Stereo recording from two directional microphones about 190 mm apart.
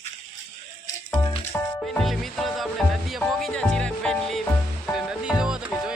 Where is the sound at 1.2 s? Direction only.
20° left (ahead or behind).